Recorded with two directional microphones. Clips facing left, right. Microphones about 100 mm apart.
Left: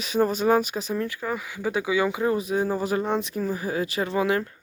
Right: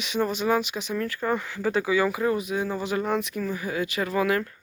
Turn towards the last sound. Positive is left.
turn(degrees=25)  # may be behind; listen again after turning